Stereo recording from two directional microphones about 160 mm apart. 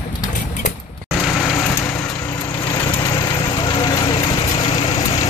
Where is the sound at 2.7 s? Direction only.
25° left (ahead or behind).